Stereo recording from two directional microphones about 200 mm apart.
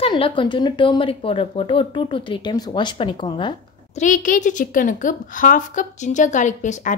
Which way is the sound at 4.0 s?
40° left (ahead or behind).